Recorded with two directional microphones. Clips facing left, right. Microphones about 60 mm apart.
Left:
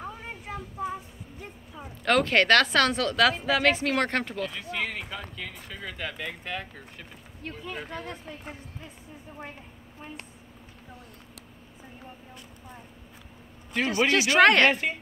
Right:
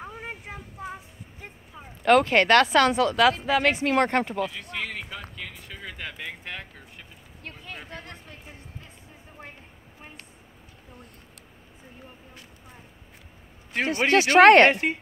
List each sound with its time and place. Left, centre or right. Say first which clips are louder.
0.0 s a sound: right 1 dB; centre
2.0 s speech: right 3 dB; centre
3.8 s speech: right 4 dB; right
13.7 s speech: right 2 dB; right